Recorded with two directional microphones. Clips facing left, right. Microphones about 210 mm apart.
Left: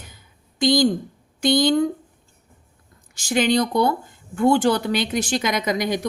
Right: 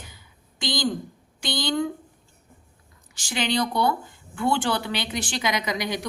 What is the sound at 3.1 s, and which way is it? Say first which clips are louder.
Speech: left 7 dB; 45° left (ahead or behind).